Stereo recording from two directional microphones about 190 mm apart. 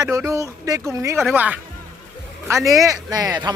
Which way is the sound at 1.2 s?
5° right (ahead or behind).